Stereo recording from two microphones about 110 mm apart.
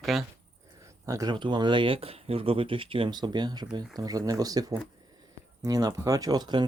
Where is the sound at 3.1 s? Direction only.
40° right (ahead or behind).